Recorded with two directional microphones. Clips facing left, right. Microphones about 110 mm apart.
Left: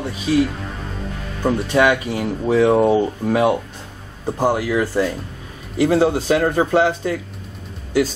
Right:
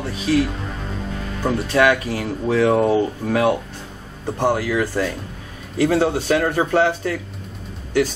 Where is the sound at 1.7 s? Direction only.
20° left (ahead or behind).